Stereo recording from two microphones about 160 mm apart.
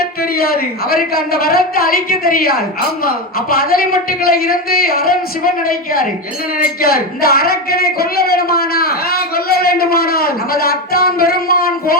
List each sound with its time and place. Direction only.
0.0 s speech: 70° left (ahead or behind)